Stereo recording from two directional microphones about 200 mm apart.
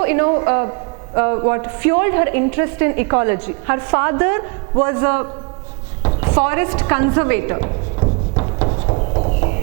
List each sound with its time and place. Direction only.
0.0 s a man's voice: 15° right (ahead or behind)
8.0 s music: 25° right (ahead or behind)